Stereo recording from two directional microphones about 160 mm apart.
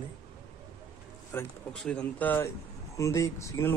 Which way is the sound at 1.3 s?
15° left (ahead or behind).